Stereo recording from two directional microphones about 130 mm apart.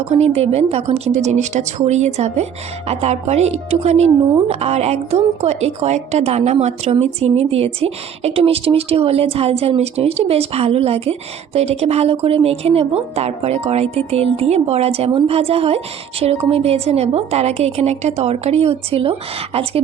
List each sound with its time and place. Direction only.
0.1 s a woman's voice: 55° right (ahead or behind)